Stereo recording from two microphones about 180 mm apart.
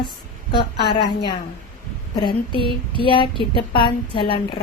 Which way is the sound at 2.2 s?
25° left (ahead or behind).